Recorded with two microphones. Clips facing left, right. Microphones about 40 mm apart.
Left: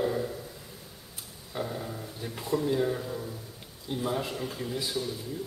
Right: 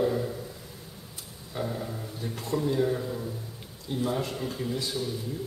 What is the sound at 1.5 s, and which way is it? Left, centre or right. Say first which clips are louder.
A man's voice: right 1 dB; centre.